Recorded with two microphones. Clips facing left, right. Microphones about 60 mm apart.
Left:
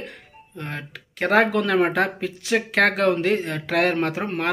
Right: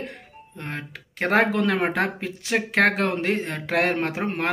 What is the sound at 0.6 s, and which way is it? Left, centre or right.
Speech, right.